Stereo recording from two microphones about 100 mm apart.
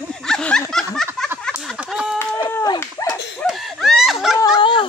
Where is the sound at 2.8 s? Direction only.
35° left (ahead or behind).